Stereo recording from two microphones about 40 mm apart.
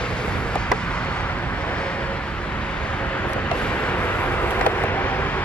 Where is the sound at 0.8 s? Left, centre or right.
Left.